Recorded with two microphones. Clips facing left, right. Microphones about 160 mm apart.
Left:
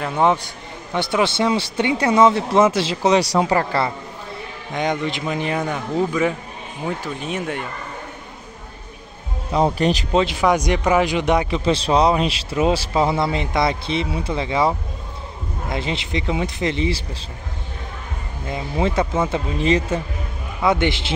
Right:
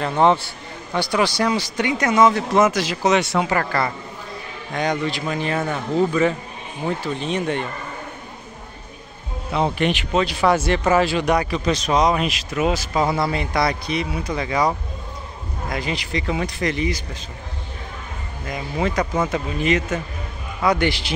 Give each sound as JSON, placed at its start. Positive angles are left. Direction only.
{"t": 0.0, "sound": "a man's voice", "side_deg": 10}
{"t": 0.9, "sound": "a man's voice", "side_deg": 25}
{"t": 9.5, "sound": "speech", "side_deg": 35}
{"t": 10.1, "sound": "speech", "side_deg": 20}
{"t": 15.7, "sound": "speech", "side_deg": 25}
{"t": 18.5, "sound": "speech", "side_deg": 25}